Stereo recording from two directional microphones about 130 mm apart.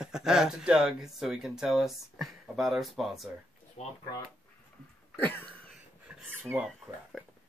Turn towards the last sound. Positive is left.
turn(degrees=0)  # may be behind; listen again after turning